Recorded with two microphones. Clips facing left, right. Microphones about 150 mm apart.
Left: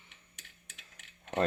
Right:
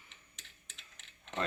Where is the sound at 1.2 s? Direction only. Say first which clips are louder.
Left 7 dB; 55° left (ahead or behind).